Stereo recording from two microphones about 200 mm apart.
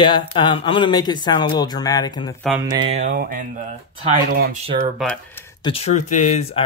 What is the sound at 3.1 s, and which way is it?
Speech, 45° right (ahead or behind).